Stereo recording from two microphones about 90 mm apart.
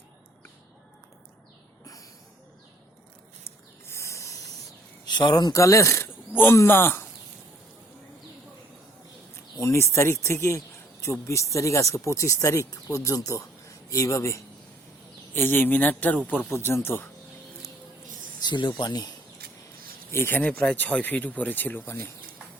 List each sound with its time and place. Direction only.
3.8 s spray: 30° left (ahead or behind)
5.0 s speech: 55° left (ahead or behind); by 7.0 s 25° left (ahead or behind)
9.6 s speech: 30° left (ahead or behind)
18.3 s speech: 55° left (ahead or behind)
20.1 s speech: 25° left (ahead or behind)
20.4 s speech: 15° left (ahead or behind)